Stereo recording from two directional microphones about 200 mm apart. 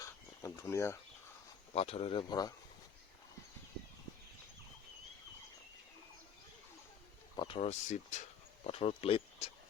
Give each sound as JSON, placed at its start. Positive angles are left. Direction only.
{"t": 0.4, "sound": "a sound", "side_deg": 15}
{"t": 1.7, "sound": "speech", "side_deg": 30}
{"t": 7.3, "sound": "speech", "side_deg": 25}